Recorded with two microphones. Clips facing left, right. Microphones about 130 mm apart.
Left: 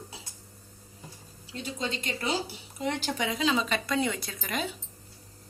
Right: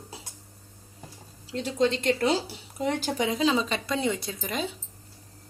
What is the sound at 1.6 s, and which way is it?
Speech, 70° right (ahead or behind).